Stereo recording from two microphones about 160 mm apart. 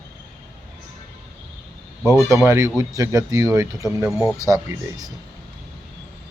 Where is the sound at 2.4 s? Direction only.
15° right (ahead or behind).